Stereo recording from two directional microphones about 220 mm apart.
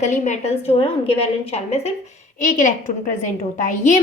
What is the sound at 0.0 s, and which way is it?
A woman's voice, 35° left (ahead or behind).